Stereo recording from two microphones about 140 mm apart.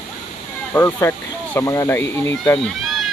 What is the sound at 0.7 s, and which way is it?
Speech, 15° left (ahead or behind).